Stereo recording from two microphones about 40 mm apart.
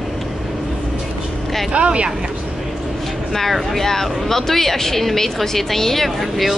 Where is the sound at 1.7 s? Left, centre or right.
Right.